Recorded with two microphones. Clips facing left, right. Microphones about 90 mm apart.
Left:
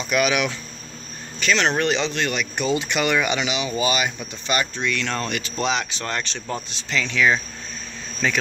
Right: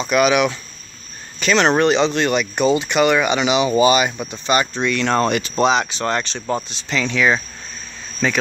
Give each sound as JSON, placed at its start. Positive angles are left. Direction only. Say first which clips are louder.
{"t": 0.0, "sound": "speech", "louder": "right 5 dB", "side_deg": -30}
{"t": 1.5, "sound": "speech", "louder": "right 5 dB", "side_deg": -45}
{"t": 1.8, "sound": "speech", "louder": "right 6 dB", "side_deg": -30}
{"t": 2.8, "sound": "speech", "louder": "right 6 dB", "side_deg": -20}
{"t": 6.9, "sound": "speech", "louder": "right 2 dB", "side_deg": -10}